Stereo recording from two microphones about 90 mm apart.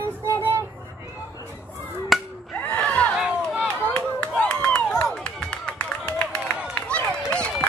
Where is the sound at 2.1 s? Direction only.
Centre (ahead or behind).